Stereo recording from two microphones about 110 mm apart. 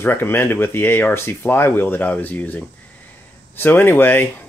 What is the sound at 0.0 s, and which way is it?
Speech, 20° left (ahead or behind).